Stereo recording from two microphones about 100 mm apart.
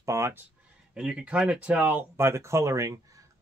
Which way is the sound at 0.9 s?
10° right (ahead or behind).